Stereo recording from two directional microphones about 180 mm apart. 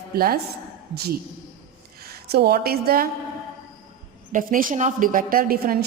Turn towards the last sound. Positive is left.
turn(degrees=-55)  # may be behind; listen again after turning